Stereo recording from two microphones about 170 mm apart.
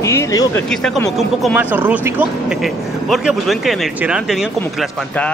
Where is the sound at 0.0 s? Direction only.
15° left (ahead or behind).